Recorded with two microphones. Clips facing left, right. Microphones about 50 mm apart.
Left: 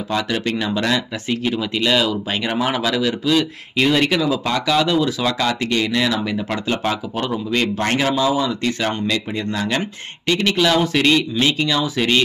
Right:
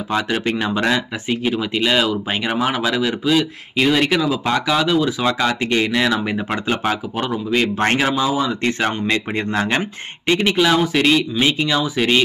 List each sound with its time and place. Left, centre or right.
0.1 s speech: right
5.2 s speech: centre
7.7 s a man's voice: right
8.0 s speech: centre
8.6 s speech: right; by 12.2 s centre